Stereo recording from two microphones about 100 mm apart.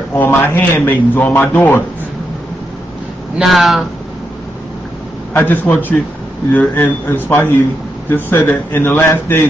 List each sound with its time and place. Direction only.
0.1 s a man's voice: 20° left (ahead or behind)
3.3 s speech: centre (ahead or behind)
5.3 s a man's voice: 20° left (ahead or behind)